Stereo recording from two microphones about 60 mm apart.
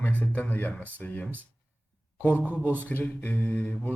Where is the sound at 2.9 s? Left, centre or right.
Left.